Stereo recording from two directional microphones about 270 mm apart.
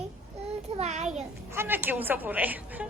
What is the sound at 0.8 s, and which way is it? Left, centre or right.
Speech, right.